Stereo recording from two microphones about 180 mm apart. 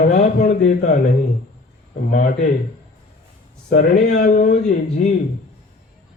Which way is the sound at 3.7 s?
45° left (ahead or behind).